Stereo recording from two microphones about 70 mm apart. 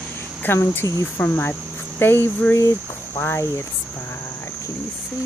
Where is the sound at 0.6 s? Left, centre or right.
Left.